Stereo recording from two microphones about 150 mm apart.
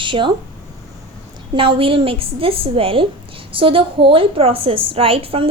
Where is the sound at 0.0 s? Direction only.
35° right (ahead or behind).